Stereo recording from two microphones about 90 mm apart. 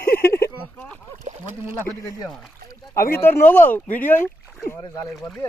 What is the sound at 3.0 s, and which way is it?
Speech, 25° left (ahead or behind).